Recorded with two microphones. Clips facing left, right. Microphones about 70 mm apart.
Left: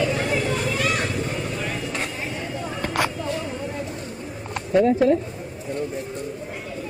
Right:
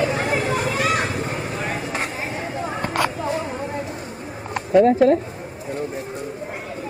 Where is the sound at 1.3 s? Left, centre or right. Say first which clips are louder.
Right 2 dB; right.